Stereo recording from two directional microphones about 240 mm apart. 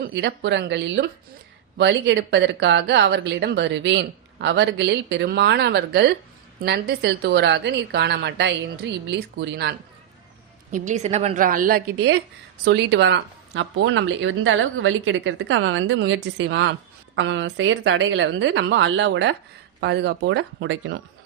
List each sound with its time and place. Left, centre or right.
0.0 s speech: right
10.7 s a woman's voice: right